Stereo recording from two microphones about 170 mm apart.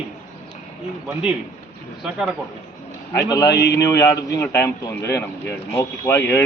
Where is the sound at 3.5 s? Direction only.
75° left (ahead or behind).